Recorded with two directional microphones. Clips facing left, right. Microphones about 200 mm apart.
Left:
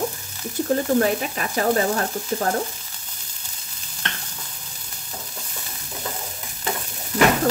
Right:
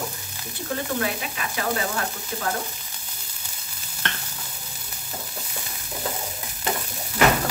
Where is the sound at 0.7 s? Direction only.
40° left (ahead or behind).